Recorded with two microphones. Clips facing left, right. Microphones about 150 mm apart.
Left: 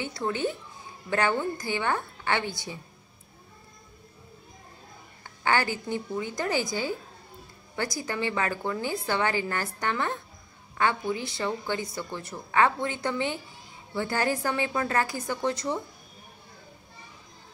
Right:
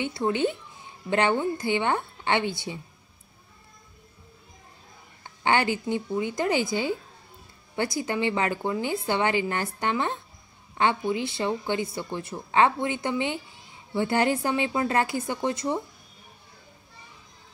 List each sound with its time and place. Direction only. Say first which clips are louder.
0.0 s a woman's voice: right 4 dB; 20° right (ahead or behind)
5.2 s a woman's voice: right 2 dB; 20° right (ahead or behind)